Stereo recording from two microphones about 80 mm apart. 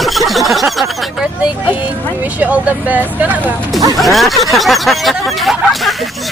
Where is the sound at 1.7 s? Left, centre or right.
Right.